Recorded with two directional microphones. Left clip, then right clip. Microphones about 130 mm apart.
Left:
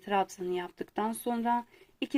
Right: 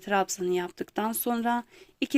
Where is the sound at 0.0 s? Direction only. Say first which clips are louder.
Right 3 dB; 40° right (ahead or behind).